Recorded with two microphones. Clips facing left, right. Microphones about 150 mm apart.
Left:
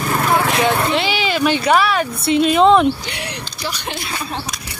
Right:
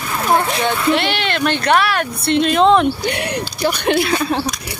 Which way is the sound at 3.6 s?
65° right (ahead or behind).